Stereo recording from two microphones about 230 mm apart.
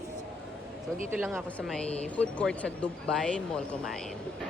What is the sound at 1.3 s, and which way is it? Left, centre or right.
Speech, centre.